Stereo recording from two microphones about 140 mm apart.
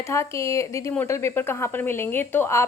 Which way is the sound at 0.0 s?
20° left (ahead or behind).